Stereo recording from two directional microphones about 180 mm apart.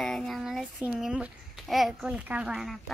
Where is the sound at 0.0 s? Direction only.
5° left (ahead or behind).